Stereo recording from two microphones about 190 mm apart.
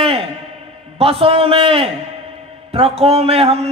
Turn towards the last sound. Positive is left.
turn(degrees=-30)  # may be behind; listen again after turning